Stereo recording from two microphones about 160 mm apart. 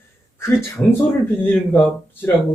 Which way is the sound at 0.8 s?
10° left (ahead or behind).